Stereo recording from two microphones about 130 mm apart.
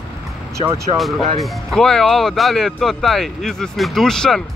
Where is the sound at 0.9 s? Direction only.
Centre (ahead or behind).